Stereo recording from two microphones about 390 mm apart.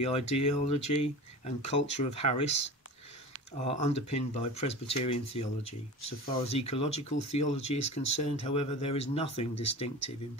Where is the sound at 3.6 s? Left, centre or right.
Centre.